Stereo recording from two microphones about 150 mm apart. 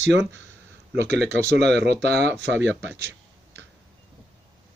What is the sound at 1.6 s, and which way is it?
Speech, 90° right.